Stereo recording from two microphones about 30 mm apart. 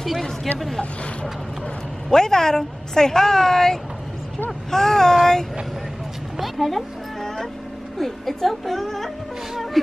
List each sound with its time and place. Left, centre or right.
0.0 s a woman's voice: centre
2.1 s speech: centre
6.4 s a sound: centre
8.0 s a woman's voice: centre